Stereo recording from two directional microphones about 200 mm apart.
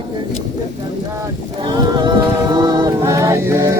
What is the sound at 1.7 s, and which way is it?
A capella, 20° right (ahead or behind).